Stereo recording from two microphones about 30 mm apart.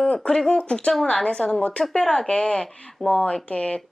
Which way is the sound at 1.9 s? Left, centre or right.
Left.